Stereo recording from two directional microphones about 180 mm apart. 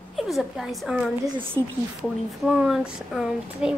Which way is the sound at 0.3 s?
Centre (ahead or behind).